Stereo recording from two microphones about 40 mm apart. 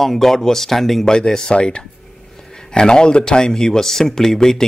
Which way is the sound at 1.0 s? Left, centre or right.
Centre.